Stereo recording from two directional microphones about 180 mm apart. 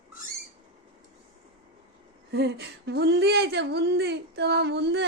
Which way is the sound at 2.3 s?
70° right (ahead or behind).